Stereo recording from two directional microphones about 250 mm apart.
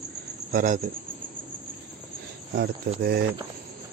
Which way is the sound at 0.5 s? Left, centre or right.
Right.